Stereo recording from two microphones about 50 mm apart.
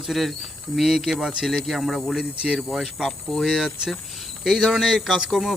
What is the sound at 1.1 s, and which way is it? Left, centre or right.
Speech, centre.